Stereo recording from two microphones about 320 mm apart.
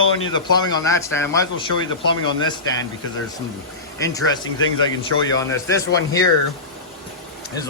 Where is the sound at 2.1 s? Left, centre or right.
Centre.